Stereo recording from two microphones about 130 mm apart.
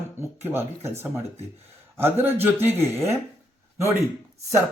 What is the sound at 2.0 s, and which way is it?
Speech, 20° right (ahead or behind).